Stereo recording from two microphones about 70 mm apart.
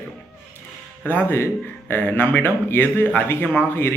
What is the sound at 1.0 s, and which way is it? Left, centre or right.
A man's voice, left.